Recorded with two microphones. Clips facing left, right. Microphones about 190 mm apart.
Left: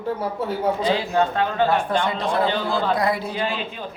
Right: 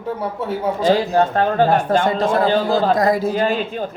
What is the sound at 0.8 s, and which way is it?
A man's voice, 45° right (ahead or behind).